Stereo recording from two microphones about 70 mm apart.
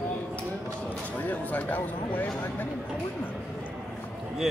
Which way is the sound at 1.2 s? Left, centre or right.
Left.